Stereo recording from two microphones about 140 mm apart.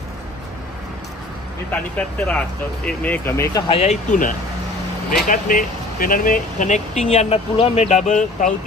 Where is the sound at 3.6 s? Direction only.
50° left (ahead or behind).